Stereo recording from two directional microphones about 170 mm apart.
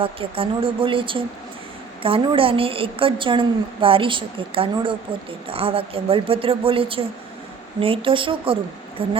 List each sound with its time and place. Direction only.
0.0 s a woman's voice: 30° right (ahead or behind)